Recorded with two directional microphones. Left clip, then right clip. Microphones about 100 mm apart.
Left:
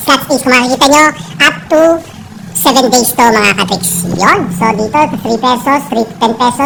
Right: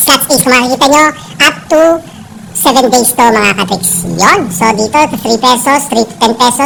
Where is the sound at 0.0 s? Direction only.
30° right (ahead or behind).